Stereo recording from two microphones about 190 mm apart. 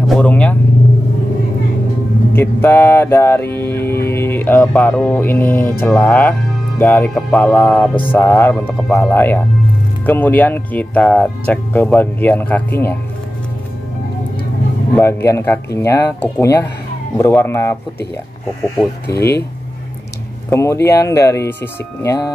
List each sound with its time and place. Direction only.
0.1 s vehicle: 5° left (ahead or behind)
2.3 s music: 10° left (ahead or behind)
15.0 s music: 10° left (ahead or behind)
18.8 s music: 10° left (ahead or behind)
20.4 s music: 15° left (ahead or behind)